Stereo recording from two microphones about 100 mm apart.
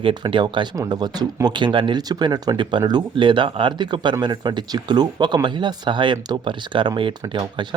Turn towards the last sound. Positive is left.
turn(degrees=-50)  # may be behind; listen again after turning